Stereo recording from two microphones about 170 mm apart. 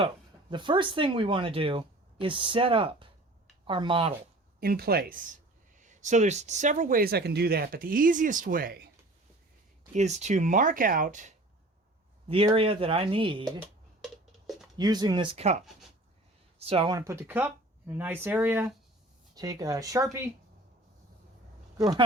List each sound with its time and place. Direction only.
0.5 s speech: 30° right (ahead or behind)
4.6 s speech: 65° right (ahead or behind)
9.9 s speech: 40° right (ahead or behind)
12.5 s speech: 35° right (ahead or behind)
14.0 s a sound: centre (ahead or behind)
14.8 s speech: 25° right (ahead or behind)
17.0 s speech: 15° right (ahead or behind)
21.8 s speech: 20° right (ahead or behind)